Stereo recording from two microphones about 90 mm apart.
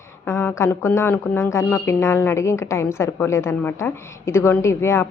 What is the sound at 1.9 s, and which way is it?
A woman's voice, 30° left (ahead or behind).